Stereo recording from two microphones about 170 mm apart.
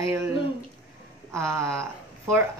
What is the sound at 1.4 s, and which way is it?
Speech, 15° right (ahead or behind).